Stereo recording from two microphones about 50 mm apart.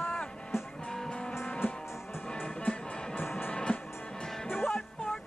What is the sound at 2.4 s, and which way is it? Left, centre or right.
Music, left.